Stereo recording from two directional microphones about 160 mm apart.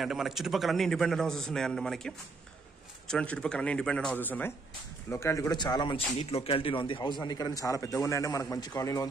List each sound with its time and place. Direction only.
0.0 s a man's voice: centre (ahead or behind); by 9.0 s 20° left (ahead or behind)